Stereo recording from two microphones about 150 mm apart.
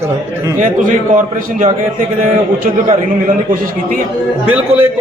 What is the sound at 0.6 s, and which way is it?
A man's voice, 60° right (ahead or behind).